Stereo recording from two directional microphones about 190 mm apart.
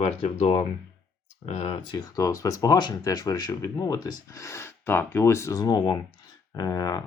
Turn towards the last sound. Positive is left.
turn(degrees=20)  # may be behind; listen again after turning